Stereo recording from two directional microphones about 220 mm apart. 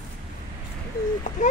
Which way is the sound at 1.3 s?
35° left (ahead or behind).